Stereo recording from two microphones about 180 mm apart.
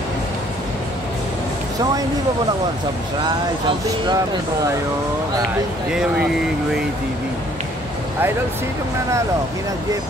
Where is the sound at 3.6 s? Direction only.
25° right (ahead or behind).